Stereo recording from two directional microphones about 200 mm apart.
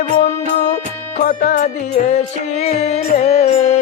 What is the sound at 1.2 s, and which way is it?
Music, 40° left (ahead or behind).